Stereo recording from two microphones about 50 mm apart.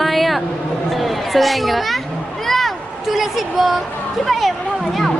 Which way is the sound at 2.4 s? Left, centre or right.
Centre.